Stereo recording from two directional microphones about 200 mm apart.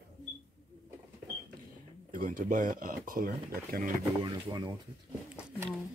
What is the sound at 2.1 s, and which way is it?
Speech, 40° right (ahead or behind).